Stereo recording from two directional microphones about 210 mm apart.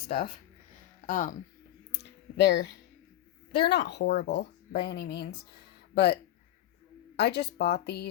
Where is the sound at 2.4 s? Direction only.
55° left (ahead or behind).